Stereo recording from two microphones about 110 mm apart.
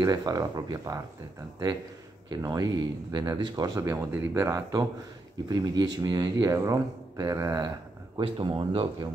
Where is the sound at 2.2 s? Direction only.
35° right (ahead or behind).